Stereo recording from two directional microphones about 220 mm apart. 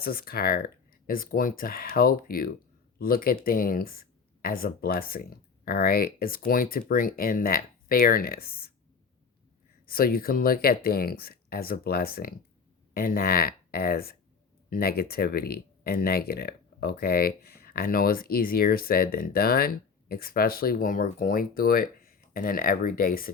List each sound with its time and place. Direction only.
0.0 s speech: 40° left (ahead or behind)
9.8 s speech: 40° left (ahead or behind)